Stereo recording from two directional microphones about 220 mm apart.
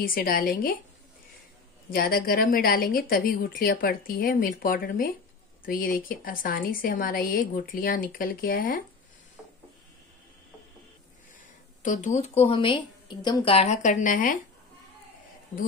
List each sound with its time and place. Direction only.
0.0 s a woman's voice: 40° left (ahead or behind)
1.9 s a woman's voice: 40° left (ahead or behind)
11.8 s a woman's voice: 35° left (ahead or behind)